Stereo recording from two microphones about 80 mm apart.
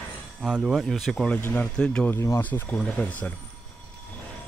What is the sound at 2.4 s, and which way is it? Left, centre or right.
Speech, left.